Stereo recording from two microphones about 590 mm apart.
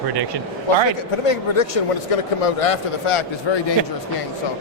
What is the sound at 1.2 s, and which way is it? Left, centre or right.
Speech, left.